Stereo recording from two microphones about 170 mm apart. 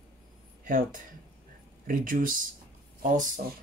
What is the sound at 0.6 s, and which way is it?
Speech, 50° right (ahead or behind).